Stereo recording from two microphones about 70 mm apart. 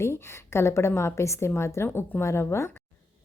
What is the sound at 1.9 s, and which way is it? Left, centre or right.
Speech, left.